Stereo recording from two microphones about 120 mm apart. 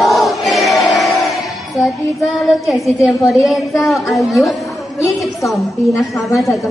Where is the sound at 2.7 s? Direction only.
Centre (ahead or behind).